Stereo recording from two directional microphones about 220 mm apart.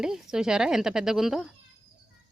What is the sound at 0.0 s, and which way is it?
Speech, centre (ahead or behind).